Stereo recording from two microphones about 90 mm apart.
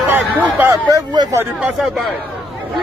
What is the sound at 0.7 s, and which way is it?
Speech, 45° right (ahead or behind).